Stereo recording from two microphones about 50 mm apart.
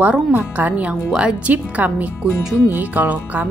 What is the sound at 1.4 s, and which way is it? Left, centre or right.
Speech, right.